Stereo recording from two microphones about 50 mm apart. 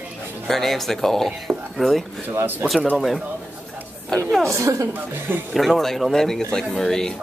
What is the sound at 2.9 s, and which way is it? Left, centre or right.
Speech, centre.